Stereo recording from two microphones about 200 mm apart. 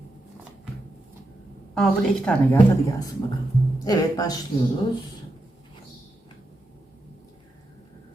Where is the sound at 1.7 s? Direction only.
5° left (ahead or behind).